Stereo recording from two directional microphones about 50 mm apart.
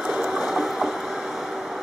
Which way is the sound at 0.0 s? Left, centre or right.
Centre.